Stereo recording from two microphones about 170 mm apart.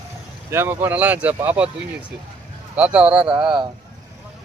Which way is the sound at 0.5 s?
15° right (ahead or behind).